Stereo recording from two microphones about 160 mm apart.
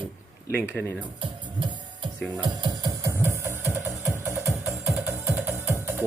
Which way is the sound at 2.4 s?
25° right (ahead or behind).